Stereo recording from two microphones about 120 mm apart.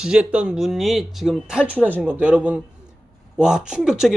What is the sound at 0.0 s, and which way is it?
A man's voice, 5° right (ahead or behind).